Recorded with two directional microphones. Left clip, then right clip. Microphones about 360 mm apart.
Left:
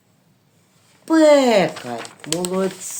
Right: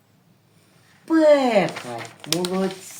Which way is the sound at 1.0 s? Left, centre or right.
Left.